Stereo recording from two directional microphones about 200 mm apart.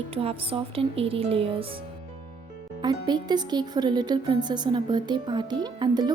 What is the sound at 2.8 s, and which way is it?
Speech, 20° right (ahead or behind).